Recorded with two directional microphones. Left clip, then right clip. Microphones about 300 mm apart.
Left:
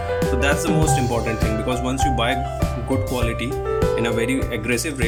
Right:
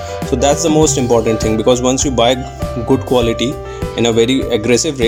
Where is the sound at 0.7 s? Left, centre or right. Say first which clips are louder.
Right 9 dB; centre.